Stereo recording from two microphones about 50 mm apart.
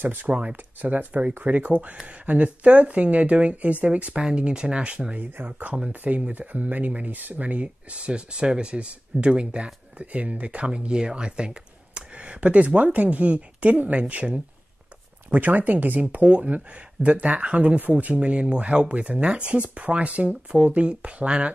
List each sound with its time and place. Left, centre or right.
0.0 s speech: right
0.3 s speech: right